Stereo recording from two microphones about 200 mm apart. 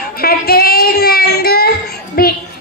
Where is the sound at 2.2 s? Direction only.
50° left (ahead or behind).